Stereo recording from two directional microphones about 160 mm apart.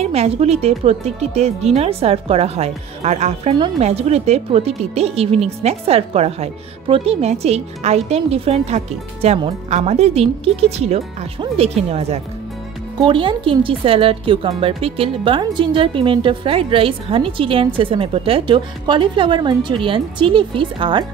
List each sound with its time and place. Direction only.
0.0 s speech: 40° right (ahead or behind)